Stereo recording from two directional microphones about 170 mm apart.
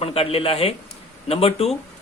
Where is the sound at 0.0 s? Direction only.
35° left (ahead or behind).